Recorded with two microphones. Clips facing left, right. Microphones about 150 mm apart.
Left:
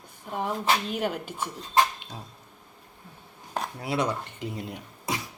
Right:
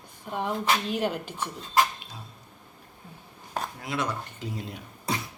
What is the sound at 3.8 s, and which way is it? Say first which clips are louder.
Speech: left 6 dB; 30° left (ahead or behind).